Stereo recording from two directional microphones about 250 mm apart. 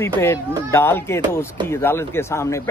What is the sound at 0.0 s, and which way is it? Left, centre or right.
A man's voice, centre.